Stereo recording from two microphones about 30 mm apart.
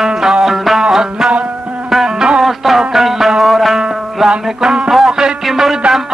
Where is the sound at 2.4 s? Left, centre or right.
Centre.